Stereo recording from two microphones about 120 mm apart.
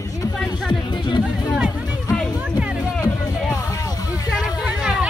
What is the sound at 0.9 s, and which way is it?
Music, 40° left (ahead or behind).